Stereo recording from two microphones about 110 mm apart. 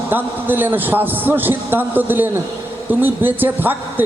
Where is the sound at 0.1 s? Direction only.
20° right (ahead or behind).